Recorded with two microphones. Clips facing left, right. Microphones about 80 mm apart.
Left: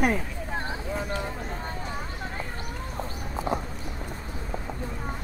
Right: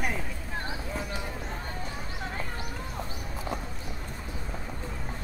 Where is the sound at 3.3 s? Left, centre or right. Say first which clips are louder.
Left 7 dB; left.